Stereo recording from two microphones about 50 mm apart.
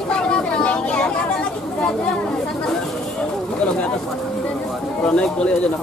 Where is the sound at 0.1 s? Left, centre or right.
Centre.